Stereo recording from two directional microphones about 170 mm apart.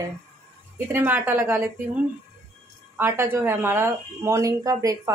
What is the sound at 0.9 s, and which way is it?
Speech, 10° right (ahead or behind).